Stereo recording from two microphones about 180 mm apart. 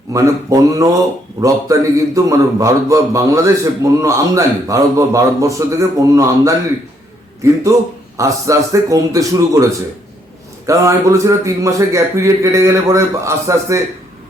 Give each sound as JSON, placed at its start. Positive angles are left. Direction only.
{"t": 0.1, "sound": "a man's voice", "side_deg": -15}
{"t": 8.1, "sound": "a man's voice", "side_deg": -15}
{"t": 10.7, "sound": "a man's voice", "side_deg": -15}